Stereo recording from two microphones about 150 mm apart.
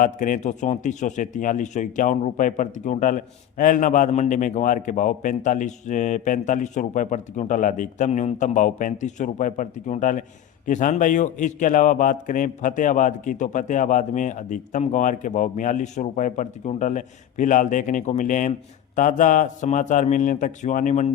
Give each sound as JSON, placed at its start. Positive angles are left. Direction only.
{"t": 0.0, "sound": "speech", "side_deg": 60}